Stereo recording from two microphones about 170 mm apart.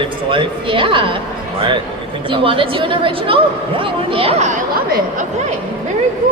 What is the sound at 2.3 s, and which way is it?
A man's voice, 30° right (ahead or behind).